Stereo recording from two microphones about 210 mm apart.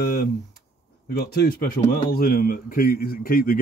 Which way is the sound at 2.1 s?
45° left (ahead or behind).